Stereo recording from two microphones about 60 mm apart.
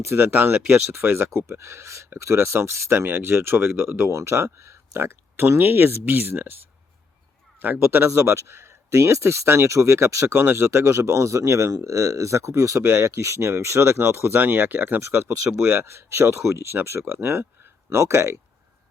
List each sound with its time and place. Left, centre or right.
0.0 s speech: right
7.9 s speech: right
8.2 s speech: right
10.3 s speech: right
15.0 s speech: right